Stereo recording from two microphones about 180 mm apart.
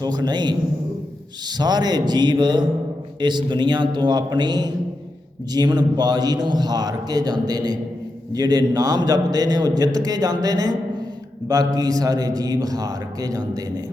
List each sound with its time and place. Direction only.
0.0 s a man's voice: 25° right (ahead or behind)